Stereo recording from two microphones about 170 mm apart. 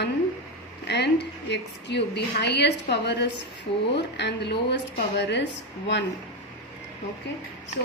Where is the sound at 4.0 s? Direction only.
90° left.